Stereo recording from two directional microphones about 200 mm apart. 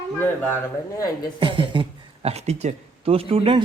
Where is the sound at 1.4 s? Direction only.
25° right (ahead or behind).